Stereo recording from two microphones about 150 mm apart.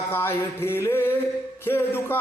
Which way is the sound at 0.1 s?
15° left (ahead or behind).